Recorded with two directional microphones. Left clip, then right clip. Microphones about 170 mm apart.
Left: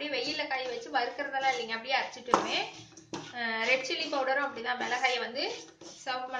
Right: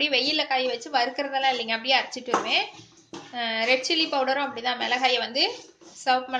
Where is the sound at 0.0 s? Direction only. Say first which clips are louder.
Right 10 dB; 55° right (ahead or behind).